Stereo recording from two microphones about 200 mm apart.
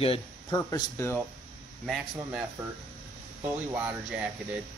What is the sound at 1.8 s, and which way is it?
Speech, centre (ahead or behind).